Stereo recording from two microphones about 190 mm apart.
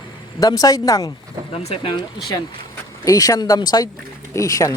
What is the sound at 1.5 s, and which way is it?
Speech, 30° left (ahead or behind).